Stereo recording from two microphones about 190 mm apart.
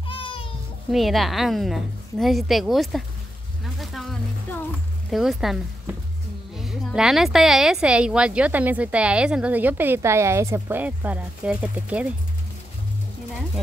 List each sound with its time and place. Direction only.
0.0 s a sound: 25° left (ahead or behind)
0.9 s a woman's voice: centre (ahead or behind)
3.6 s music: centre (ahead or behind)
5.1 s speech: centre (ahead or behind)